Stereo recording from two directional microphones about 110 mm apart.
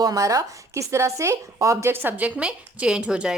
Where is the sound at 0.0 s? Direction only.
30° right (ahead or behind).